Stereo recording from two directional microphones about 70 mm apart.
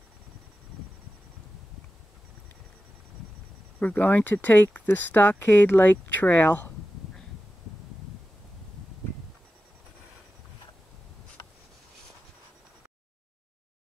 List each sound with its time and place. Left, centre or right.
3.8 s speech: left